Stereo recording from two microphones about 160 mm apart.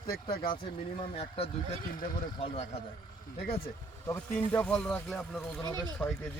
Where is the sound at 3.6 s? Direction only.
15° left (ahead or behind).